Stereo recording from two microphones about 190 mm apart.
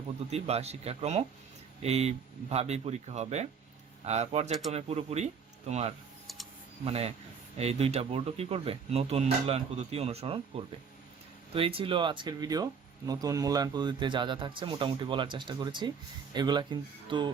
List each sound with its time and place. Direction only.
0.3 s speech: 35° right (ahead or behind)
6.2 s a sound: centre (ahead or behind)
6.8 s speech: 35° right (ahead or behind)
11.5 s a man's voice: 30° right (ahead or behind)